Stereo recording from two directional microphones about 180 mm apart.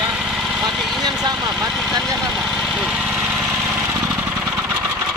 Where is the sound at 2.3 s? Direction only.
5° left (ahead or behind).